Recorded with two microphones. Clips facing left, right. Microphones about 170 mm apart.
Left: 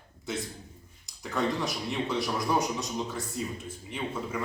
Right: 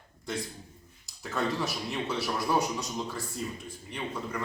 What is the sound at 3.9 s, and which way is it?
Speech, 5° left (ahead or behind).